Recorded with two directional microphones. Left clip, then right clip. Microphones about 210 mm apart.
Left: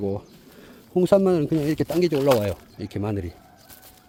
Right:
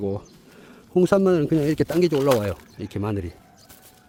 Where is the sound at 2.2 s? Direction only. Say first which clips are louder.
Even; 5° right (ahead or behind).